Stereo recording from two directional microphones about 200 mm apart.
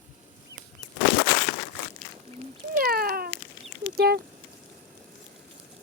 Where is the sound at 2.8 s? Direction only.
50° right (ahead or behind).